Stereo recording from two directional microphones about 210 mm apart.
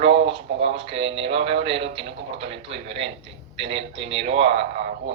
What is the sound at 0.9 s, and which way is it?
Speech, 25° right (ahead or behind).